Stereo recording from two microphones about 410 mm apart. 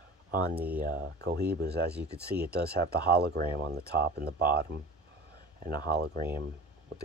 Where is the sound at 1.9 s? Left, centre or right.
Centre.